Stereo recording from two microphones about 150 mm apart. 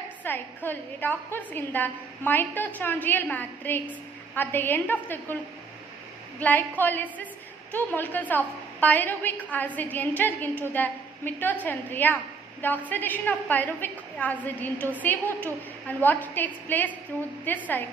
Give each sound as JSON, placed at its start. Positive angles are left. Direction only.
{"t": 0.2, "sound": "a woman's voice", "side_deg": 15}
{"t": 6.4, "sound": "a woman's voice", "side_deg": 10}